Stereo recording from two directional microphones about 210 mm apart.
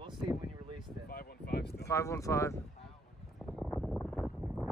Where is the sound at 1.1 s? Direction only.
50° left (ahead or behind).